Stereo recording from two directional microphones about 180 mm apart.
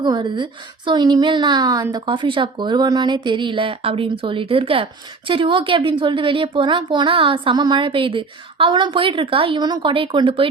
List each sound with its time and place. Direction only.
0.0 s a woman's voice: 25° right (ahead or behind)